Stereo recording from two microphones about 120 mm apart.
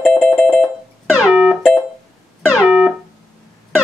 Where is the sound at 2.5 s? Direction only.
10° right (ahead or behind).